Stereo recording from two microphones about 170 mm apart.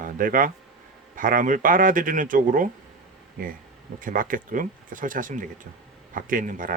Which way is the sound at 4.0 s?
55° right (ahead or behind).